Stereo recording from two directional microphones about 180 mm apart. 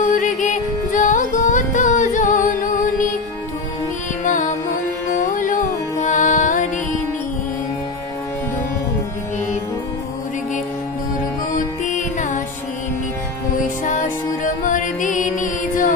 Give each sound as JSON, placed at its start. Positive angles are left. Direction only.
{"t": 0.0, "sound": "music", "side_deg": 45}
{"t": 4.2, "sound": "music", "side_deg": 45}
{"t": 11.5, "sound": "music", "side_deg": 45}
{"t": 13.8, "sound": "music", "side_deg": 45}